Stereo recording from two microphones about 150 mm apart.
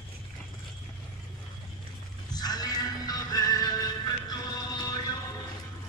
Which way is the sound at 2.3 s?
25° left (ahead or behind).